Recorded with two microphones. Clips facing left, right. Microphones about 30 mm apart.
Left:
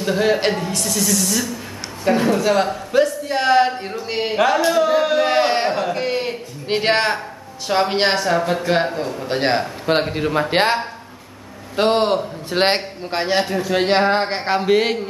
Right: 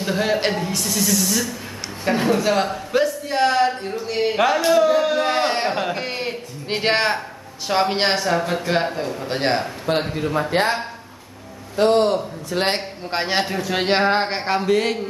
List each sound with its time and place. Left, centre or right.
0.0 s a man's voice: centre
4.4 s a man's voice: centre
10.1 s a man's voice: left
13.1 s a man's voice: centre
14.4 s speech: centre